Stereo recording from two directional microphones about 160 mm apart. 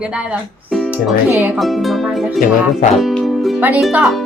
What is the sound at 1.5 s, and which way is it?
Speech, centre (ahead or behind).